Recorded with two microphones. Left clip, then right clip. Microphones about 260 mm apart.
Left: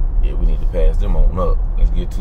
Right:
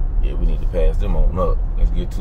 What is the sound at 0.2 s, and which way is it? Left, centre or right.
Speech, centre.